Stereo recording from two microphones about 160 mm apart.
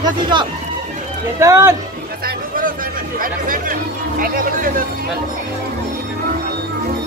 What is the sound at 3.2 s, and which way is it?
Speech, 60° right (ahead or behind).